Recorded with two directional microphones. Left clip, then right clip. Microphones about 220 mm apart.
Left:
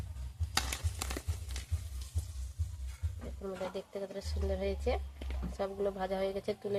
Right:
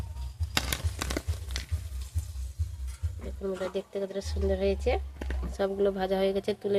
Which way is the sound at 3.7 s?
40° right (ahead or behind).